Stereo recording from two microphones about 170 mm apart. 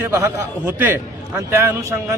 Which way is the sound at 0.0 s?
15° right (ahead or behind).